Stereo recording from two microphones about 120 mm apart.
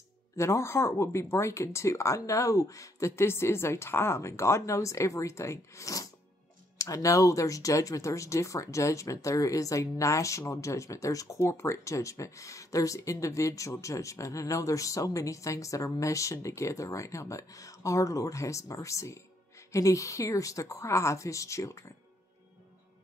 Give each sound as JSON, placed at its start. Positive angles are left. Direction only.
{"t": 0.4, "sound": "speech", "side_deg": 25}